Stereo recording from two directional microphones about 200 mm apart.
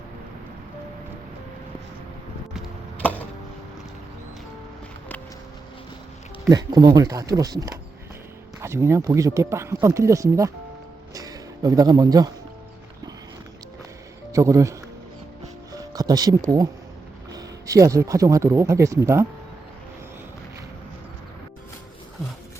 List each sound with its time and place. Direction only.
2.5 s a sound: centre (ahead or behind)
6.5 s speech: 20° right (ahead or behind)
14.3 s speech: 15° right (ahead or behind)
15.7 s music: 20° right (ahead or behind)
17.3 s speech: 15° right (ahead or behind)